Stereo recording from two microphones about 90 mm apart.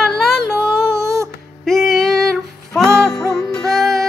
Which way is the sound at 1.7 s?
Centre (ahead or behind).